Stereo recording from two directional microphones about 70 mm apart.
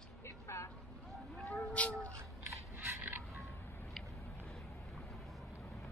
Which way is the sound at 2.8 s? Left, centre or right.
Right.